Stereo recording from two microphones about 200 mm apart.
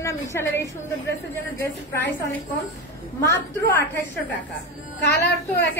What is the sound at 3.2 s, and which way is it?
Speech, 15° left (ahead or behind).